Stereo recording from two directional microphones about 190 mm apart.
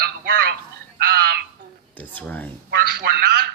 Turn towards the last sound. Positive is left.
turn(degrees=-55)  # may be behind; listen again after turning